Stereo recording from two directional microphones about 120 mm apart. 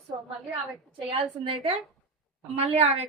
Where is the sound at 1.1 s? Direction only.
45° right (ahead or behind).